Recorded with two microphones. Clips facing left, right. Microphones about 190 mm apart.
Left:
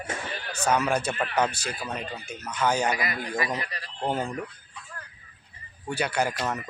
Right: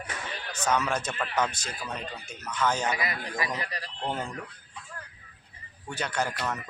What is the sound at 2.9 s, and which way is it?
Speech, 25° right (ahead or behind).